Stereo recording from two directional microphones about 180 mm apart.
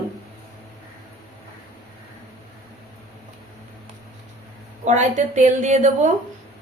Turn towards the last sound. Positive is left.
turn(degrees=-40)  # may be behind; listen again after turning